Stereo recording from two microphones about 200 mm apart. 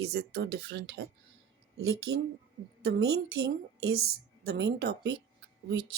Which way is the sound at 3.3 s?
55° right (ahead or behind).